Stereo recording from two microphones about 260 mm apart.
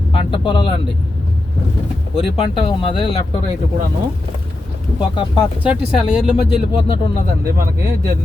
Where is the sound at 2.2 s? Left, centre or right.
Left.